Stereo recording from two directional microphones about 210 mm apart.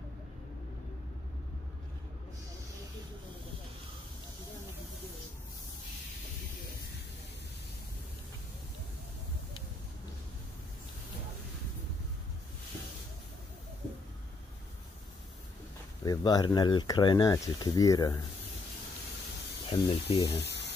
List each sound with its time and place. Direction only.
16.0 s speech: 20° left (ahead or behind)
19.7 s speech: 25° left (ahead or behind)
20.3 s a sound: 55° left (ahead or behind)